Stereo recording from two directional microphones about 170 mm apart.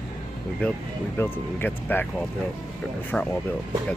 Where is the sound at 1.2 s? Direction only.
10° left (ahead or behind).